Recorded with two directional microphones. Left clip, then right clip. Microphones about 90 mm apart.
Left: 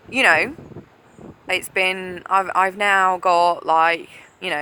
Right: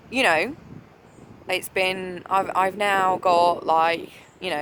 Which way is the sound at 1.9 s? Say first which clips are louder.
Left 4 dB; 50° right (ahead or behind).